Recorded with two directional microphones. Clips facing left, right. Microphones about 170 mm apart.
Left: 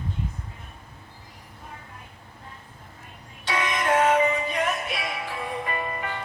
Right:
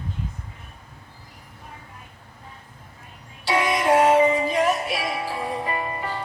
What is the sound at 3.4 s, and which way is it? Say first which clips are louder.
Music: right 5 dB; 35° right (ahead or behind).